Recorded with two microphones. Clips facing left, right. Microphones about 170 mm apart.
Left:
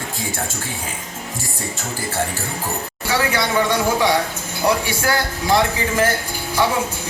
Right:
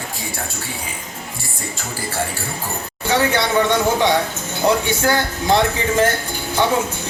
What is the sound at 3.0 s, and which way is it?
Speech, 25° right (ahead or behind).